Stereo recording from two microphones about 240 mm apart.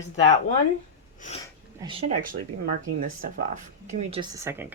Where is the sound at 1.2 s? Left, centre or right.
Left.